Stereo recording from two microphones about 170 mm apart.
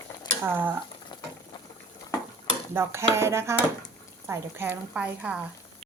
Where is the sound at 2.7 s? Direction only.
15° right (ahead or behind).